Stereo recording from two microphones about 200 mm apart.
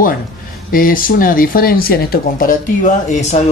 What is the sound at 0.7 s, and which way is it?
Speech, 45° left (ahead or behind).